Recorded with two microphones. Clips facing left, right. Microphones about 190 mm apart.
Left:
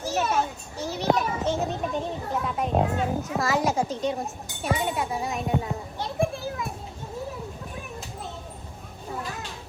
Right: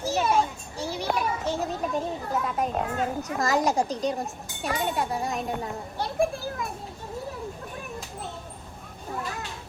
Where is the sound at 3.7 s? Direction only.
Centre (ahead or behind).